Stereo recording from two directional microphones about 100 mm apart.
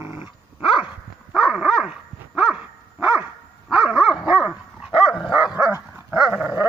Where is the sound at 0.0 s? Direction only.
20° right (ahead or behind).